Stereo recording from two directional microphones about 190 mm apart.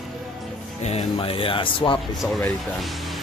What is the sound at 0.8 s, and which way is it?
Speech, 30° left (ahead or behind).